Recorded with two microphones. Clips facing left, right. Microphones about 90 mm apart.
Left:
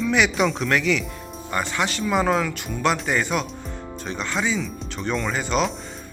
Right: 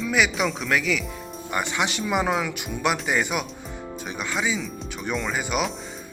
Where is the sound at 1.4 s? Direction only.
15° right (ahead or behind).